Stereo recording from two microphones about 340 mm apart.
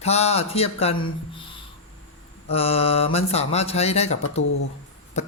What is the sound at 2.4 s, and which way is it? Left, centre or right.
Speech, centre.